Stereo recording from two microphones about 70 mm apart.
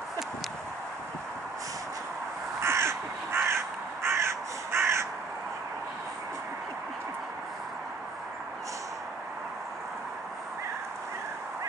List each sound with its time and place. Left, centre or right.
2.6 s crow: right